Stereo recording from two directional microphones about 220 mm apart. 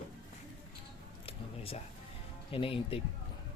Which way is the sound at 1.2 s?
25° left (ahead or behind).